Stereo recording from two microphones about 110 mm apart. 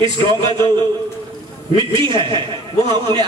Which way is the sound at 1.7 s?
50° right (ahead or behind).